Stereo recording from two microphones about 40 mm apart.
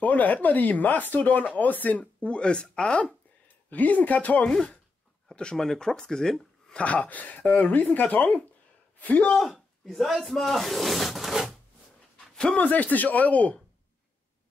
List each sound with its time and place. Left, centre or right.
0.0 s speech: left
2.2 s speech: left
3.4 s speech: left
5.3 s speech: left
6.8 s speech: left
9.4 s speech: centre
12.5 s speech: left